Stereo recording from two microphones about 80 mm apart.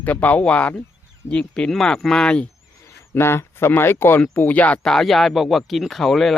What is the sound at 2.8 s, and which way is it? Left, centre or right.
Speech, left.